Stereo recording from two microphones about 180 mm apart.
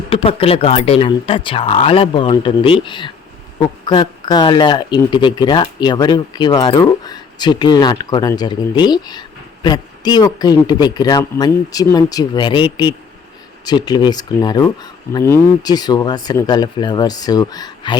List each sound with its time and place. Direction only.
0.1 s speech: 30° left (ahead or behind)